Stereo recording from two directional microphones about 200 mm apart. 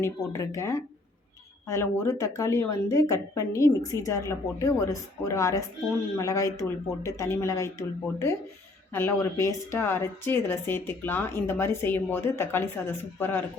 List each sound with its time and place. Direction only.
0.0 s a woman's voice: 15° left (ahead or behind)
8.9 s a woman's voice: 10° left (ahead or behind)